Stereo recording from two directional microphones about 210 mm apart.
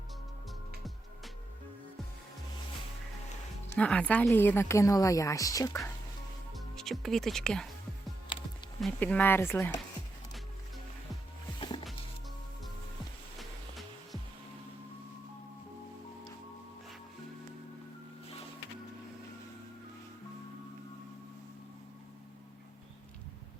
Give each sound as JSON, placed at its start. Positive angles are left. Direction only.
{"t": 3.8, "sound": "a woman's voice", "side_deg": 5}
{"t": 6.5, "sound": "music", "side_deg": 0}
{"t": 8.8, "sound": "a woman's voice", "side_deg": 5}
{"t": 11.6, "sound": "music", "side_deg": 20}